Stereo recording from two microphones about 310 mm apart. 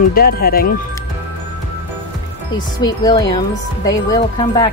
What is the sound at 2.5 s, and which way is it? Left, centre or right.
Speech, centre.